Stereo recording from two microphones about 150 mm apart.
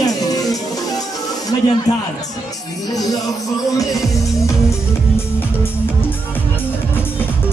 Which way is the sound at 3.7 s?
20° left (ahead or behind).